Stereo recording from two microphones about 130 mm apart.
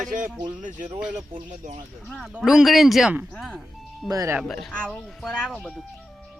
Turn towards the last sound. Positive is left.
turn(degrees=0)  # may be behind; listen again after turning